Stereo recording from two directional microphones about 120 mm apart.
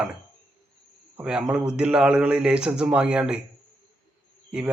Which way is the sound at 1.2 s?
5° right (ahead or behind).